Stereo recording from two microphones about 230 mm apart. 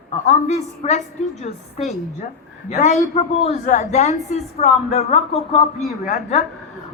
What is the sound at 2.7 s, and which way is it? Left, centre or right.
A man's voice, left.